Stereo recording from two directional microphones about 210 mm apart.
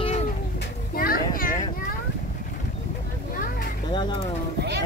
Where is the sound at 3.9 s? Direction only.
20° left (ahead or behind).